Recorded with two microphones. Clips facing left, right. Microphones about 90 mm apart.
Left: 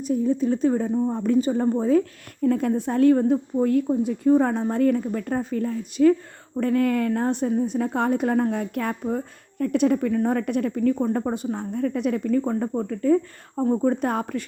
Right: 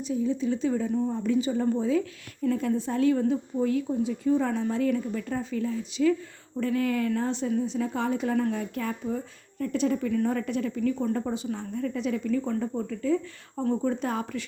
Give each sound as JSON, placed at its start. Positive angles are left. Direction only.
{"t": 0.0, "sound": "a woman's voice", "side_deg": 50}
{"t": 0.9, "sound": "a woman's voice", "side_deg": 30}
{"t": 1.1, "sound": "a woman's voice", "side_deg": 45}